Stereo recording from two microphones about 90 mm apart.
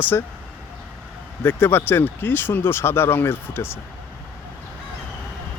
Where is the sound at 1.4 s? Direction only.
25° left (ahead or behind).